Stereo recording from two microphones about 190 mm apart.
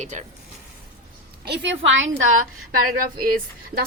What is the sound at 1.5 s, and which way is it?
Speech, 75° right (ahead or behind).